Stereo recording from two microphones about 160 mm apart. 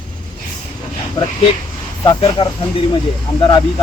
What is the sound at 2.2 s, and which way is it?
A man's voice, 35° left (ahead or behind).